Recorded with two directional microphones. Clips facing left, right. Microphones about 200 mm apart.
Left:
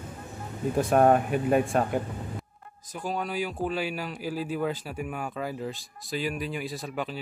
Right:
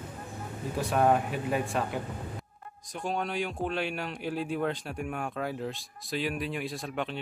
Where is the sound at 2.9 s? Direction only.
Centre (ahead or behind).